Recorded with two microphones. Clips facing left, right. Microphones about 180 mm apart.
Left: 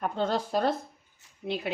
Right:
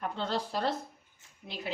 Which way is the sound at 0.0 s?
45° left (ahead or behind).